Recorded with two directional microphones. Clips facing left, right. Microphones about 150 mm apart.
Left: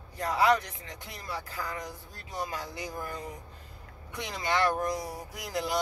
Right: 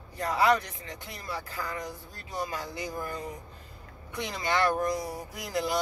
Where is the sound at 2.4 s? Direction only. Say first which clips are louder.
Right 2 dB; 10° left (ahead or behind).